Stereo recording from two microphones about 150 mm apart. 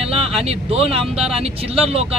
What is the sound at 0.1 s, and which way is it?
A man's voice, 40° right (ahead or behind).